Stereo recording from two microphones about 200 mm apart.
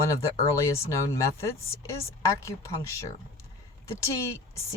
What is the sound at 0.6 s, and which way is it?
Speech, 15° left (ahead or behind).